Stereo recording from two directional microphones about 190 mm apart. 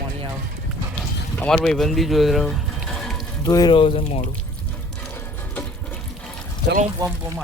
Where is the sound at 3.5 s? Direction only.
20° left (ahead or behind).